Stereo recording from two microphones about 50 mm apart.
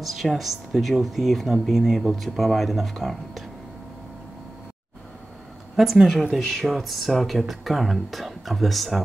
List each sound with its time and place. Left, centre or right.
0.0 s speech: centre
5.8 s speech: centre